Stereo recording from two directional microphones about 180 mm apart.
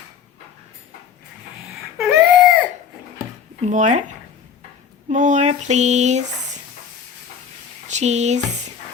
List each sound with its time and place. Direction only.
2.0 s baby cry: 5° right (ahead or behind)
3.7 s female singing: 40° right (ahead or behind)
7.9 s speech: 40° right (ahead or behind)